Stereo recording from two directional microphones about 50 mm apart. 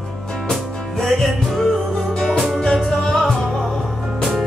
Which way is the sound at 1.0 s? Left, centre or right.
Centre.